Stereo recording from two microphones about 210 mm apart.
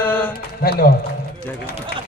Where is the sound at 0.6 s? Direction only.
45° left (ahead or behind).